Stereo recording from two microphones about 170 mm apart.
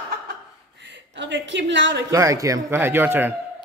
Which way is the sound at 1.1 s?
90° right.